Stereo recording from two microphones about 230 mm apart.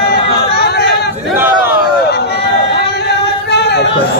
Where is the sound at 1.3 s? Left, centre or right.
Centre.